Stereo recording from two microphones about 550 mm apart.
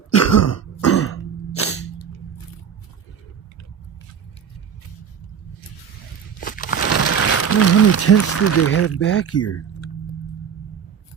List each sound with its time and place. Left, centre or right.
0.1 s cough: left
6.4 s crumpling: centre